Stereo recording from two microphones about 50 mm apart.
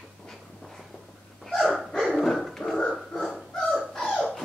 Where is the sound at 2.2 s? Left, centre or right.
Centre.